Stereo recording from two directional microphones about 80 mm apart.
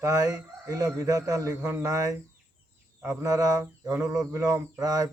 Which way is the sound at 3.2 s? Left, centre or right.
Right.